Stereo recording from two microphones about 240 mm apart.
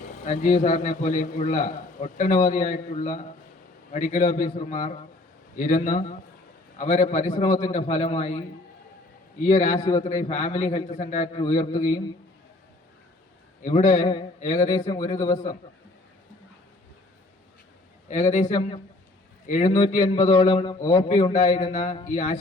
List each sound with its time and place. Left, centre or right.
0.3 s a man's voice: left
9.5 s a man's voice: left
10.0 s a man's voice: left
11.4 s a man's voice: centre
13.7 s a man's voice: left
18.1 s a man's voice: left